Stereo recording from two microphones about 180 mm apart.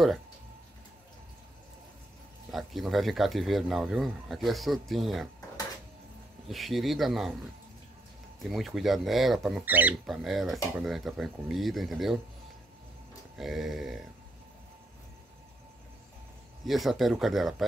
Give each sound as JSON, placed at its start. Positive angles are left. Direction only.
{"t": 2.5, "sound": "speech", "side_deg": 0}
{"t": 6.5, "sound": "speech", "side_deg": 0}
{"t": 8.4, "sound": "speech", "side_deg": 0}
{"t": 13.4, "sound": "speech", "side_deg": 0}
{"t": 16.6, "sound": "speech", "side_deg": 0}